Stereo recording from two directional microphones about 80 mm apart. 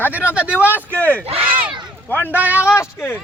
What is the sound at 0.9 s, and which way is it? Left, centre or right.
A man's voice, centre.